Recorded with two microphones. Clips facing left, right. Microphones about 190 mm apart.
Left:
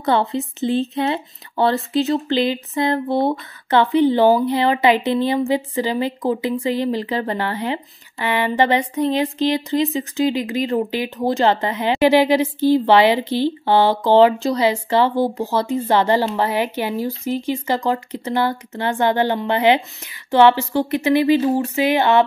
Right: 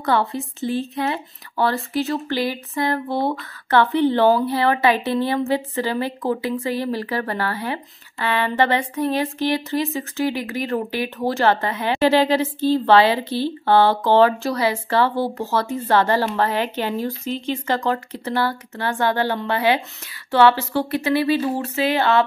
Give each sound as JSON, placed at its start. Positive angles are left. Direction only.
{"t": 0.0, "sound": "speech", "side_deg": 20}